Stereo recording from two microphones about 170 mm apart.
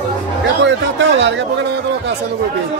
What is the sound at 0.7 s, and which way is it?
Speech, 90° right.